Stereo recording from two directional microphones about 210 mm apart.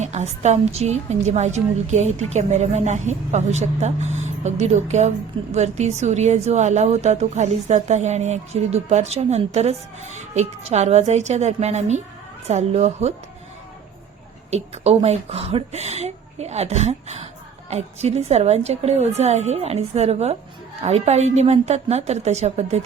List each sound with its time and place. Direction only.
0.0 s a woman's voice: 35° right (ahead or behind)
14.5 s a woman's voice: 30° right (ahead or behind)